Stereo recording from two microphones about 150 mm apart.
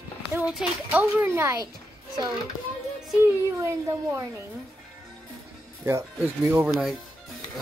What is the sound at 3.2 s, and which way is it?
A child's voice, 15° right (ahead or behind).